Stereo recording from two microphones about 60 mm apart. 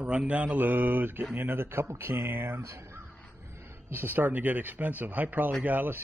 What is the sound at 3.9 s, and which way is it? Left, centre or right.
Speech, right.